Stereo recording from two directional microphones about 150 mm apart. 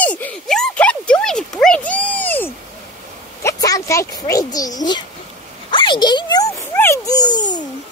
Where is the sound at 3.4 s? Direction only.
20° left (ahead or behind).